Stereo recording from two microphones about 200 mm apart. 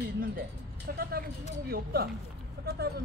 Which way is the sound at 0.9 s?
50° right (ahead or behind).